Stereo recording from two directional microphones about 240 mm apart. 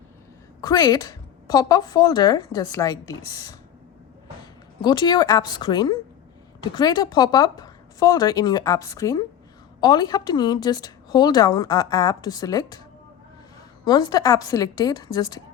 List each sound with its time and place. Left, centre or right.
0.6 s a woman's voice: centre
4.8 s a woman's voice: centre
13.8 s a woman's voice: centre